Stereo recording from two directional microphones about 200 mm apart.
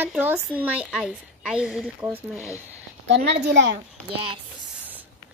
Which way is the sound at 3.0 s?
55° right (ahead or behind).